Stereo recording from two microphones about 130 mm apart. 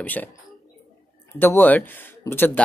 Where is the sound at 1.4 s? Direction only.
15° left (ahead or behind).